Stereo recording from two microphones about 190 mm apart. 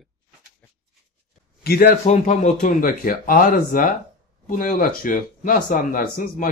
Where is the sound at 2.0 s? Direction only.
40° left (ahead or behind).